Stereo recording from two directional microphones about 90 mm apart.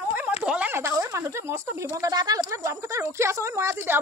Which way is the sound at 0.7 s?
30° right (ahead or behind).